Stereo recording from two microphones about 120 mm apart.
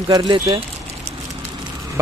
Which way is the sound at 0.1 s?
35° right (ahead or behind).